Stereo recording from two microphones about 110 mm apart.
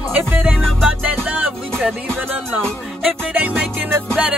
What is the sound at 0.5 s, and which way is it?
Music, centre (ahead or behind).